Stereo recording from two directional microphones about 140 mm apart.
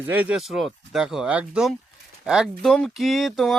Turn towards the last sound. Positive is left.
turn(degrees=0)  # may be behind; listen again after turning